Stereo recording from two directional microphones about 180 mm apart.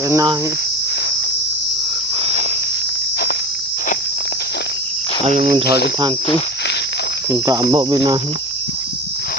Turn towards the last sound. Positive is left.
turn(degrees=-30)  # may be behind; listen again after turning